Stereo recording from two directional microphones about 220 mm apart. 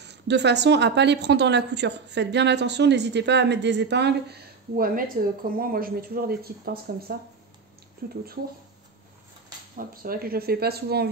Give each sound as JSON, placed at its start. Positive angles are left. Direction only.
{"t": 0.0, "sound": "speech", "side_deg": -50}
{"t": 9.8, "sound": "speech", "side_deg": -45}